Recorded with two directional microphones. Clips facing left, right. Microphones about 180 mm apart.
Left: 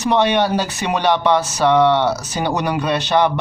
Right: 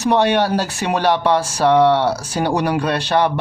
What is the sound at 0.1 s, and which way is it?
Speech, 10° right (ahead or behind).